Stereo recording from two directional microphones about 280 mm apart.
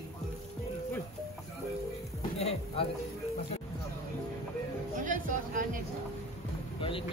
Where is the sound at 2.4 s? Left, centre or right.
Left.